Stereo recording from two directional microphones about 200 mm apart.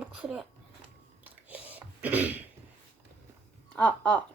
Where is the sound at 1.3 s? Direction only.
5° right (ahead or behind).